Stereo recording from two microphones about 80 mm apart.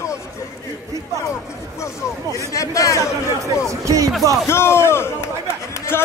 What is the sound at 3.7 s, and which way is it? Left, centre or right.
Speech, right.